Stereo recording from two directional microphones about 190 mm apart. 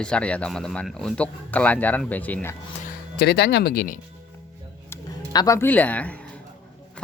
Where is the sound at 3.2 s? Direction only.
60° left (ahead or behind).